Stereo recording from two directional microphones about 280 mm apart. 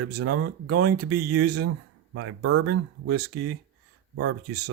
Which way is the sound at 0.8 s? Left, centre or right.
Right.